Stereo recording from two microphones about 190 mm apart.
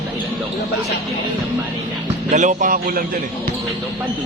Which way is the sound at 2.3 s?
40° right (ahead or behind).